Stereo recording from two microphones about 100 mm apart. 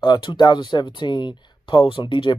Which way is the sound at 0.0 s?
50° left (ahead or behind).